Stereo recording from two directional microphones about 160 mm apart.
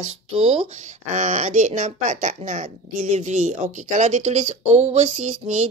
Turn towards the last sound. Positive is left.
turn(degrees=-45)  # may be behind; listen again after turning